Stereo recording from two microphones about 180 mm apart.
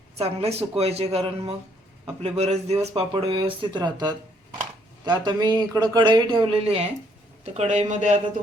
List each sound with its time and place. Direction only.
0.2 s speech: 35° right (ahead or behind)